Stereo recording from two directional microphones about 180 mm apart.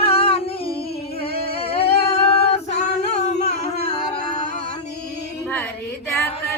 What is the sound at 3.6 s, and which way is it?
Music, 40° left (ahead or behind).